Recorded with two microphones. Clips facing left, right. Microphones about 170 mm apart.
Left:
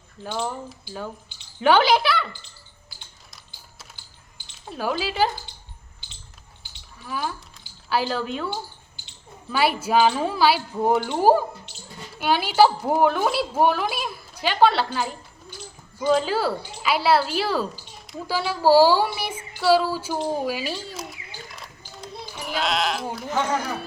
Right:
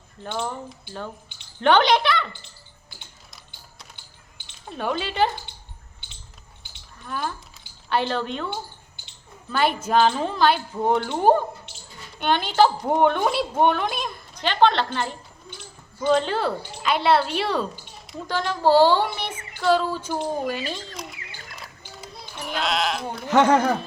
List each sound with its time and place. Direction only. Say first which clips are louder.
0.2 s speech: left 1 dB; 5° left (ahead or behind)
4.7 s speech: left 1 dB; centre (ahead or behind)
7.0 s speech: even; 5° left (ahead or behind)
9.5 s a woman's voice: even; 5° left (ahead or behind)
23.3 s speech: right 8 dB; 70° right (ahead or behind)